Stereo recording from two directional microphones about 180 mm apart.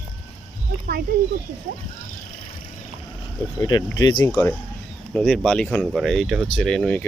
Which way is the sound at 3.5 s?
20° left (ahead or behind).